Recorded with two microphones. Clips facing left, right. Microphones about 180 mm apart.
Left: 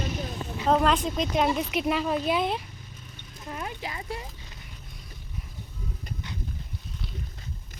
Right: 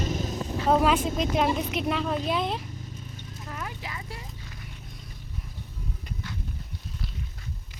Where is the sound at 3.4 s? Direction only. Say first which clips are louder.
Left 3 dB; 25° left (ahead or behind).